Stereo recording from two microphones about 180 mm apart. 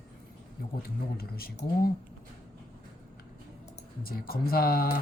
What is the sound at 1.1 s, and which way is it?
Speech, 55° left (ahead or behind).